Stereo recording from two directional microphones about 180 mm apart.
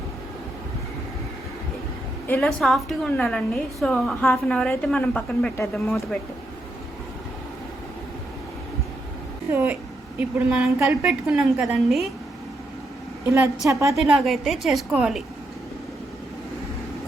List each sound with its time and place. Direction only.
2.2 s a woman's voice: 5° left (ahead or behind)
9.5 s a woman's voice: 10° right (ahead or behind)
13.7 s a woman's voice: 15° right (ahead or behind)
13.9 s a woman's voice: centre (ahead or behind)